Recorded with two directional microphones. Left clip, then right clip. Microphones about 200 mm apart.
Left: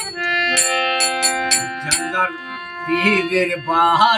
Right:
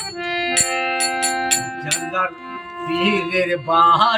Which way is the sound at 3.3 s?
5° right (ahead or behind).